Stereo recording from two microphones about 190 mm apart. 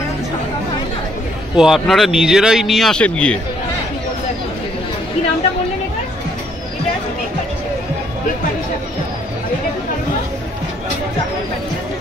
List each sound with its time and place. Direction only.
1.6 s speech: centre (ahead or behind)